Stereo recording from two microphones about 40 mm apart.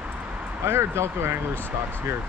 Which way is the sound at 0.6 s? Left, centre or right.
Right.